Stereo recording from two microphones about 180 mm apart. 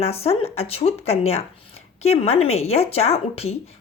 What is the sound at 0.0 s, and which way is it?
Speech, 35° left (ahead or behind).